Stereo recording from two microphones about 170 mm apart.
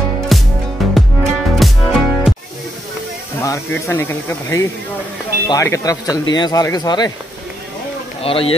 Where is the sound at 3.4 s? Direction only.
15° left (ahead or behind).